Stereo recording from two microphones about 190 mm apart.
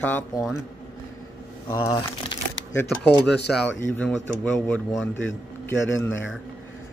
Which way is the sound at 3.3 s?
65° left (ahead or behind).